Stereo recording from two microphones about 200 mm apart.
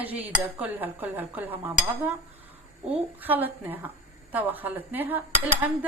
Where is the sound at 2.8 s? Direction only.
5° right (ahead or behind).